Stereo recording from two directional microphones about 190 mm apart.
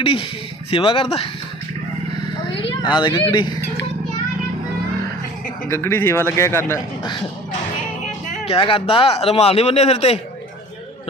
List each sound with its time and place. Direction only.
0.0 s speech: 25° left (ahead or behind)
2.9 s speech: 25° left (ahead or behind)
5.6 s speech: 15° left (ahead or behind)
7.0 s speech: 25° left (ahead or behind)
8.3 s speech: 30° left (ahead or behind)